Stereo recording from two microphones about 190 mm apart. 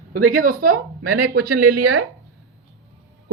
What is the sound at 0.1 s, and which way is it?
Speech, 45° right (ahead or behind).